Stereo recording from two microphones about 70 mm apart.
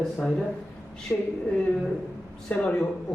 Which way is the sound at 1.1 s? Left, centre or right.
Centre.